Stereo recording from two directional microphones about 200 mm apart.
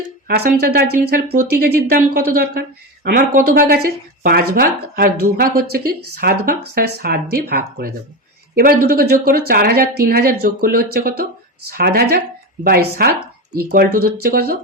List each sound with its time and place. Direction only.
0.3 s speech: 50° right (ahead or behind)